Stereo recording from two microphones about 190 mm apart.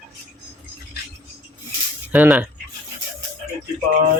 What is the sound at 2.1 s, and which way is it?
Speech, 10° right (ahead or behind).